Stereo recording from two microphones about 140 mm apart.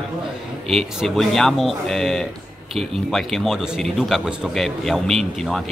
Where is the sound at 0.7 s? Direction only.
Centre (ahead or behind).